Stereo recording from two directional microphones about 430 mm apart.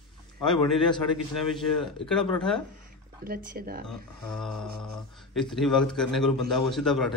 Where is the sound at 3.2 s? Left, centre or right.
Right.